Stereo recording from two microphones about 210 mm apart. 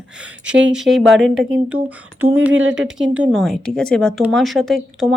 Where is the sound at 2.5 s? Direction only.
65° right (ahead or behind).